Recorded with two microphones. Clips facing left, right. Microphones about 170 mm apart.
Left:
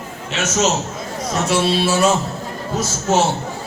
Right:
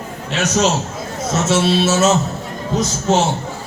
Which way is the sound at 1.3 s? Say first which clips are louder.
Right 2 dB; 25° right (ahead or behind).